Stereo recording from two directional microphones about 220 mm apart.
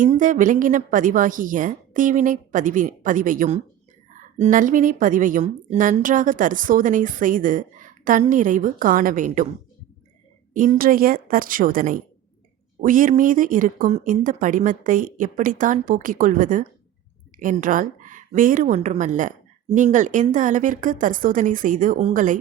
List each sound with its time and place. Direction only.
0.0 s a woman's voice: 35° right (ahead or behind)
10.5 s a woman's voice: 40° right (ahead or behind)